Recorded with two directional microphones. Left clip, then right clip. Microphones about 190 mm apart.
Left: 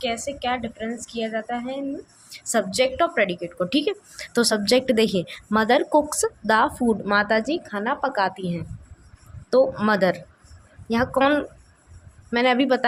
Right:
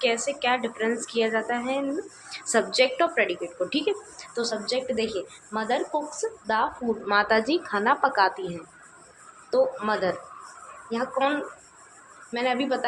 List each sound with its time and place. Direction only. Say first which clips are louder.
0.0 s a woman's voice: right 2 dB; 25° left (ahead or behind); by 6.7 s 45° left (ahead or behind)
7.1 s a woman's voice: right 1 dB; 30° left (ahead or behind)
9.5 s speech: left 4 dB; 45° left (ahead or behind)